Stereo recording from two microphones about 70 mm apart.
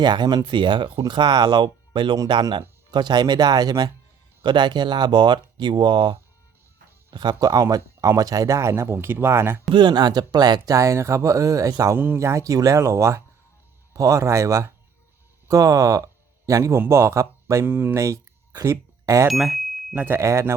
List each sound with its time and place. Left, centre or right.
0.0 s speech: right
2.1 s speech: right
4.4 s speech: right
7.1 s speech: right
9.7 s speech: right
10.7 s speech: right
11.9 s speech: right
17.9 s a sound: right
19.3 s bicycle bell: centre
20.0 s speech: right